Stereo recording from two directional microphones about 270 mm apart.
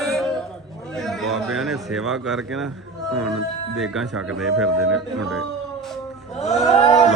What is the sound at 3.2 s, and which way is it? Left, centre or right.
Speech, centre.